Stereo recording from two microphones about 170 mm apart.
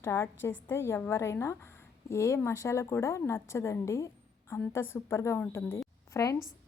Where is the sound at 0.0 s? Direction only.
15° left (ahead or behind).